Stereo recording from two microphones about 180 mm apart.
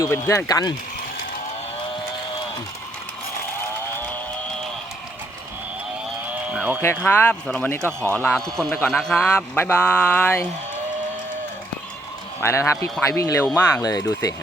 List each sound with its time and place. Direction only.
0.0 s speech: 15° left (ahead or behind)
6.2 s cattle: 10° right (ahead or behind)
6.8 s speech: 10° left (ahead or behind)
7.8 s speech: 15° right (ahead or behind)
8.1 s speech: 5° left (ahead or behind)
12.4 s speech: 15° left (ahead or behind)